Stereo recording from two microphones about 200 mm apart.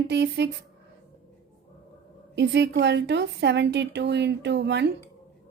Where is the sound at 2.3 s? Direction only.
60° right (ahead or behind).